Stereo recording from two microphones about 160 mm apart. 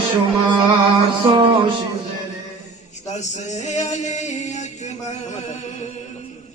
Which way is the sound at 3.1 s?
45° left (ahead or behind).